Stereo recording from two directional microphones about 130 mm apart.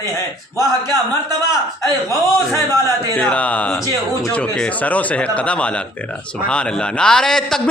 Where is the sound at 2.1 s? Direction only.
25° left (ahead or behind).